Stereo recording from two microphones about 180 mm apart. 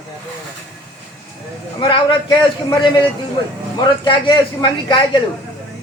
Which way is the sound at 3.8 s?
25° left (ahead or behind).